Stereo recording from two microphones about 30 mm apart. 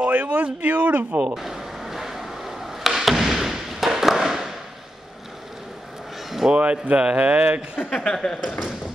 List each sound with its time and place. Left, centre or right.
0.0 s speech: right
1.3 s a sound: centre
3.3 s thump: centre
6.5 s speech: right
8.0 s speech: left